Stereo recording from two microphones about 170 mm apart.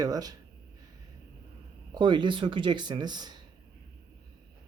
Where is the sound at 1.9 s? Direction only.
25° right (ahead or behind).